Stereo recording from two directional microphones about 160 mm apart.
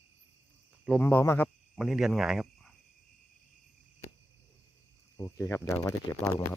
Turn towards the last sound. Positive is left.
turn(degrees=20)  # may be behind; listen again after turning